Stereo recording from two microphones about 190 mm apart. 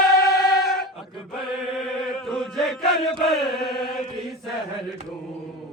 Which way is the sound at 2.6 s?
Centre (ahead or behind).